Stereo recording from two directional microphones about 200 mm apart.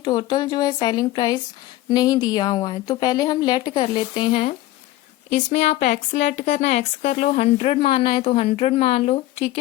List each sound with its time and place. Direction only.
0.0 s a woman's voice: 20° left (ahead or behind)